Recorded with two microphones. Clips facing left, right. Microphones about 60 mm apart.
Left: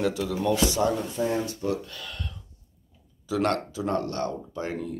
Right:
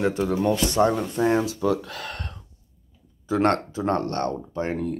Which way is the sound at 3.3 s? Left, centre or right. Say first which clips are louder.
Right 4 dB; right.